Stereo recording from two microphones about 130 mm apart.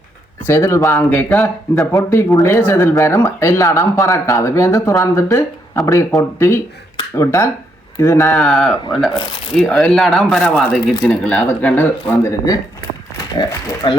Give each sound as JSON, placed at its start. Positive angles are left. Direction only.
{"t": 0.4, "sound": "speech", "side_deg": 20}
{"t": 8.4, "sound": "speech", "side_deg": 5}
{"t": 13.4, "sound": "speech", "side_deg": 35}